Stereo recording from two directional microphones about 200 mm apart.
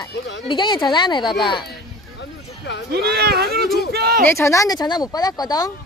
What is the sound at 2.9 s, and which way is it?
Speech, 50° right (ahead or behind).